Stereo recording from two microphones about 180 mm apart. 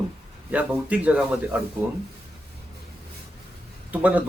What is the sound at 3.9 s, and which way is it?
Speech, 10° right (ahead or behind).